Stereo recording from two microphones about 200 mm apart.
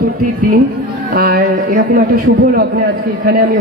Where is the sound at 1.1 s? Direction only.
50° right (ahead or behind).